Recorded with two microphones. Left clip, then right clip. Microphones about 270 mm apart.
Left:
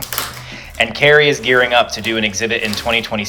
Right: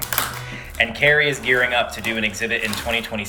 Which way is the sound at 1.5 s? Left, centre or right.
Left.